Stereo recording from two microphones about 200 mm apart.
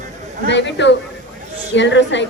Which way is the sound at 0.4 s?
60° left (ahead or behind).